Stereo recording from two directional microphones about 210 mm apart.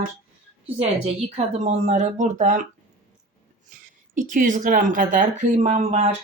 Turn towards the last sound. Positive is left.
turn(degrees=-30)  # may be behind; listen again after turning